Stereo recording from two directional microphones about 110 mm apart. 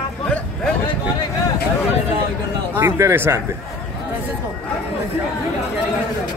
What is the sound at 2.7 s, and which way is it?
Speech, 20° right (ahead or behind).